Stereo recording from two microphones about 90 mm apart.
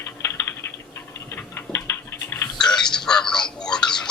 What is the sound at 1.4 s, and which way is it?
Tick-tock, 25° left (ahead or behind).